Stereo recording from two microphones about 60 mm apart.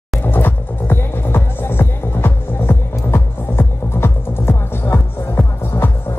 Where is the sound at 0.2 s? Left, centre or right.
Left.